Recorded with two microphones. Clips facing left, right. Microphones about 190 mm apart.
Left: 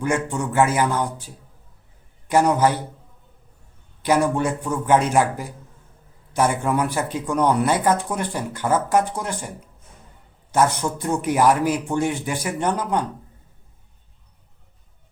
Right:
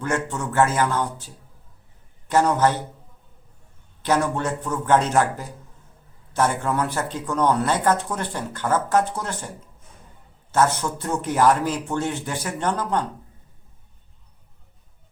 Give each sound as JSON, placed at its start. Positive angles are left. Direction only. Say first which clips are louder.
{"t": 0.0, "sound": "speech", "louder": "left 3 dB", "side_deg": 15}
{"t": 4.0, "sound": "speech", "louder": "left 3 dB", "side_deg": 10}
{"t": 10.5, "sound": "speech", "louder": "left 1 dB", "side_deg": 15}